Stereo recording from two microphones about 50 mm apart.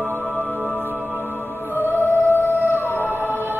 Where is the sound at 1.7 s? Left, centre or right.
Left.